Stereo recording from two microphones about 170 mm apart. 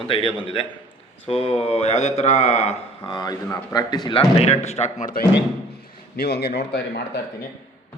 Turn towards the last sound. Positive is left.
turn(degrees=75)  # may be behind; listen again after turning